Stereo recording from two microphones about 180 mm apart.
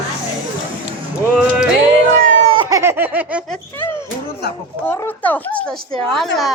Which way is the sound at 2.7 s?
15° right (ahead or behind).